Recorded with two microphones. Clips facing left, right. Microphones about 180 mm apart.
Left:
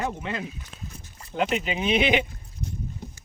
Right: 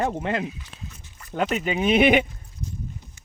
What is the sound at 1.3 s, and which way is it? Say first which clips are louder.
Speech: right 2 dB; 45° right (ahead or behind).